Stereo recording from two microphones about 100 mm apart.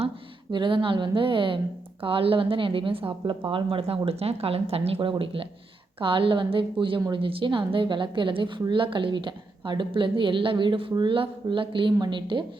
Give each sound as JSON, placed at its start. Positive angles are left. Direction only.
{"t": 0.5, "sound": "a woman's voice", "side_deg": -55}
{"t": 4.9, "sound": "a woman's voice", "side_deg": -55}